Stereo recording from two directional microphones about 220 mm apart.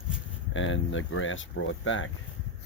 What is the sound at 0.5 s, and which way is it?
Speech, 60° left (ahead or behind).